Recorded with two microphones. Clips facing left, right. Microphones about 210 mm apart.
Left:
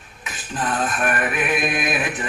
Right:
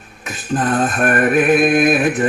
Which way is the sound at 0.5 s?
50° right (ahead or behind).